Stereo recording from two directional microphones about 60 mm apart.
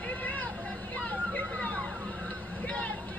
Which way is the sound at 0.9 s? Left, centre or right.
Left.